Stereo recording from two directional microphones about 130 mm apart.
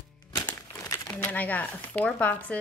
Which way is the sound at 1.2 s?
15° left (ahead or behind).